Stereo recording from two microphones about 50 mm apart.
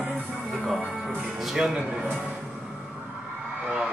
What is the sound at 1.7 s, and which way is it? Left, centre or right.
Speech, centre.